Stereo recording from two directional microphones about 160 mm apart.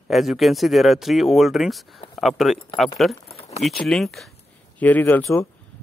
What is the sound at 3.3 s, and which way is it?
Keys jangling, 40° left (ahead or behind).